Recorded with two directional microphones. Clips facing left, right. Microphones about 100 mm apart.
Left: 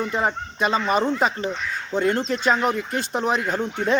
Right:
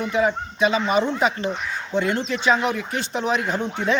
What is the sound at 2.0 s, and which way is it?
Speech, 45° left (ahead or behind).